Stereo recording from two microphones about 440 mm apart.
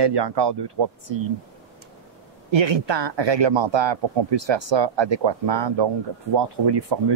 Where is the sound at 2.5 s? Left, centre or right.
Right.